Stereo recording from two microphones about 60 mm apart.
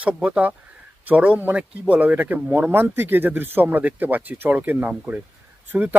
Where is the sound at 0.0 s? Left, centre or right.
Centre.